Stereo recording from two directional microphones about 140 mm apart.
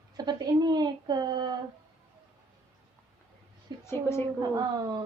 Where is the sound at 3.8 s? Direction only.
15° left (ahead or behind).